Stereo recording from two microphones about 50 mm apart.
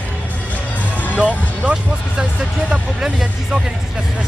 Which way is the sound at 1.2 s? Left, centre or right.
Right.